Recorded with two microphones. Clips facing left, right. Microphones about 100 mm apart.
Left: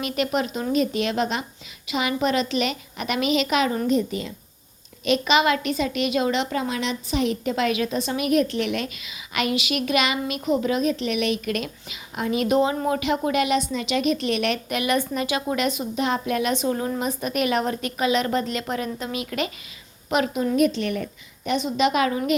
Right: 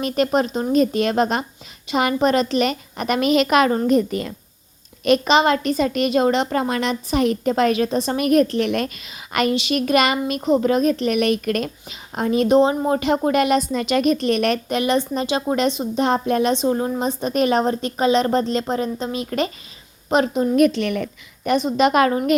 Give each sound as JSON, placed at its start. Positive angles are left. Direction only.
{"t": 0.0, "sound": "a woman's voice", "side_deg": -40}
{"t": 5.0, "sound": "a woman's voice", "side_deg": -45}
{"t": 20.6, "sound": "a woman's voice", "side_deg": -65}
{"t": 21.4, "sound": "a woman's voice", "side_deg": -45}